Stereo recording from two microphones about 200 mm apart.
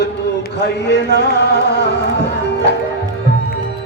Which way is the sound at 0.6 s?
55° left (ahead or behind).